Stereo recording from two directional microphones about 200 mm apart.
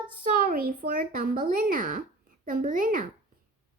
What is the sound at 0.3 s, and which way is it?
A child's voice, 45° right (ahead or behind).